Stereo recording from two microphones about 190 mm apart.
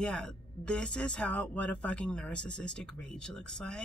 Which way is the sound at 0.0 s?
5° left (ahead or behind).